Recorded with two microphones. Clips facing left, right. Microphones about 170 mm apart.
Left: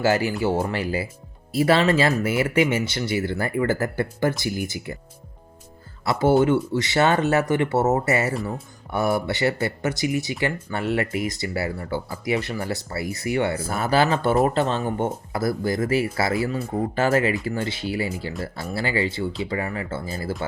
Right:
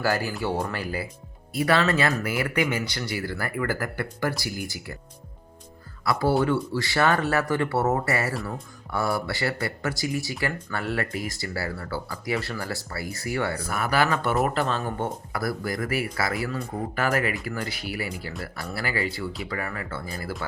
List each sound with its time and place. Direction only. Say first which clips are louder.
0.6 s speech: left 5 dB; 25° left (ahead or behind)
6.1 s speech: left 4 dB; 20° left (ahead or behind)